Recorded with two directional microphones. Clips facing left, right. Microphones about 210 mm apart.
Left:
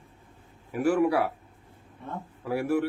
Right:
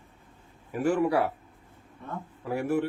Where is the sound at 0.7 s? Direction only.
10° left (ahead or behind).